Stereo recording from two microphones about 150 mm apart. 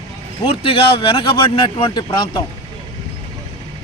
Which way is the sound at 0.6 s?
35° left (ahead or behind).